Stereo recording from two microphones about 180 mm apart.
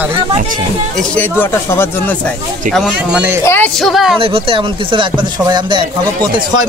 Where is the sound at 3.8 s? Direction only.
Centre (ahead or behind).